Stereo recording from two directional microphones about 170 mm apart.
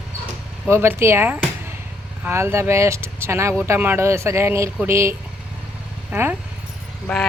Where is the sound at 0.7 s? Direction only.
10° right (ahead or behind).